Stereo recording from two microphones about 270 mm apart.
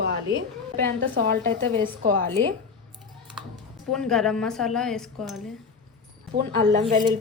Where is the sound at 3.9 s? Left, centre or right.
Centre.